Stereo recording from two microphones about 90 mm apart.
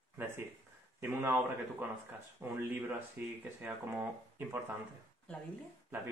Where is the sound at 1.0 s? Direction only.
25° right (ahead or behind).